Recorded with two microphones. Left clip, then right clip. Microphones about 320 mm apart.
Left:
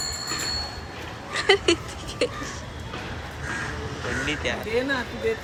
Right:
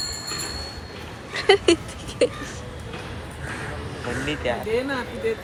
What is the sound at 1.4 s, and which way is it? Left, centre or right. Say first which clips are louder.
Speech: right 3 dB; centre.